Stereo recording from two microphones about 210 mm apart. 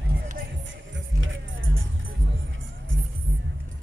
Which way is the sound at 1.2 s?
65° right (ahead or behind).